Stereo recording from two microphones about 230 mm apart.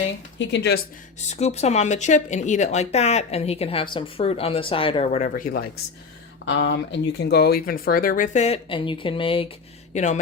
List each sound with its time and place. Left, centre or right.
0.3 s speech: left
1.3 s speech: left
6.4 s speech: left